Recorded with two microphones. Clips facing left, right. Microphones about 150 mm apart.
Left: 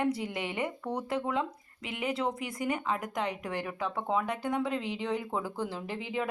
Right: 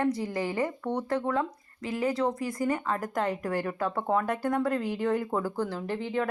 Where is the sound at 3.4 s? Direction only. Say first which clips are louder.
Right 5 dB; 10° left (ahead or behind).